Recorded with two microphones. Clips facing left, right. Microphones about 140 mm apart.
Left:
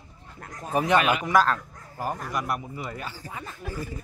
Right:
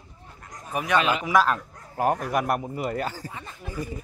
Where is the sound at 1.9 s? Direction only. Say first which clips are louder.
Right 7 dB; 70° right (ahead or behind); by 3.3 s 45° right (ahead or behind).